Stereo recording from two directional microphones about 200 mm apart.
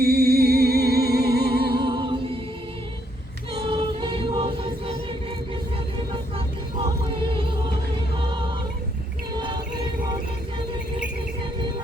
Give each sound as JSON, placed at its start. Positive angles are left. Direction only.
{"t": 0.0, "sound": "music", "side_deg": -50}
{"t": 1.8, "sound": "music", "side_deg": -25}
{"t": 3.5, "sound": "choir", "side_deg": -20}
{"t": 8.1, "sound": "music", "side_deg": -25}
{"t": 9.3, "sound": "a sound", "side_deg": -25}